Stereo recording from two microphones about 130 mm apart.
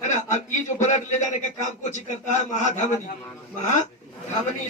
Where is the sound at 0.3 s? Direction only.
65° left (ahead or behind).